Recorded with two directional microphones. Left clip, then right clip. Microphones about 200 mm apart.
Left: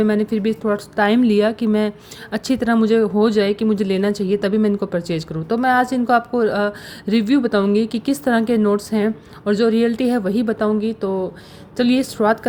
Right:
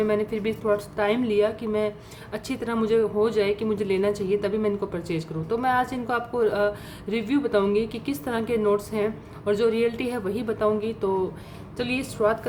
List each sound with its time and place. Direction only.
0.0 s speech: 30° left (ahead or behind)